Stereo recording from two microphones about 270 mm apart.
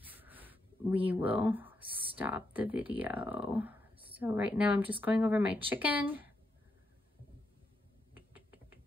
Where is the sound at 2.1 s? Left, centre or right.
Centre.